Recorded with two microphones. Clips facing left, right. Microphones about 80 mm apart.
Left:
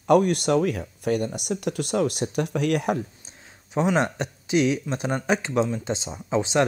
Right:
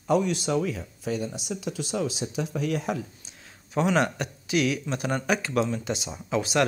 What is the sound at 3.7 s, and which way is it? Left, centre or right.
Speech, left.